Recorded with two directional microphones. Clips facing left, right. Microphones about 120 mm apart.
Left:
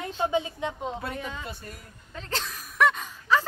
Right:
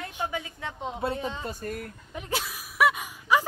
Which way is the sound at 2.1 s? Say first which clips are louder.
Right 1 dB; 10° right (ahead or behind).